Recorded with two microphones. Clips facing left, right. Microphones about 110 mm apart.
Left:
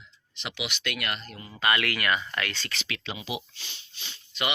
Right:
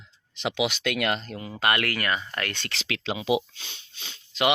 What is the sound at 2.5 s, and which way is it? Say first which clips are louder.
Speech: right 3 dB; 75° right (ahead or behind).